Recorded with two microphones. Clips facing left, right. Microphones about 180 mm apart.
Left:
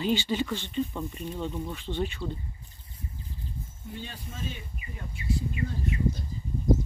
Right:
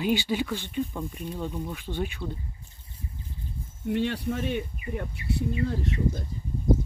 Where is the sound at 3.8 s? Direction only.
75° right (ahead or behind).